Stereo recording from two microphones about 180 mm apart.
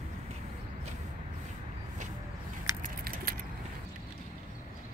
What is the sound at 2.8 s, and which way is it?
Keys jangling, 50° right (ahead or behind).